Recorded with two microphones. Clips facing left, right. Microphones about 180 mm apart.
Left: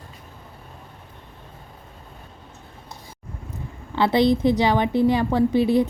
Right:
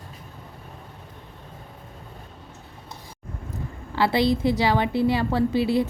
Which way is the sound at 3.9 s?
20° left (ahead or behind).